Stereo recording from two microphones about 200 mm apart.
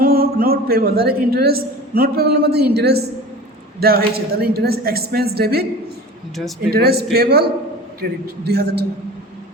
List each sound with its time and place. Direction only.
0.0 s a woman's voice: 50° right (ahead or behind)
6.7 s speech: 50° right (ahead or behind)
8.4 s speech: 55° right (ahead or behind)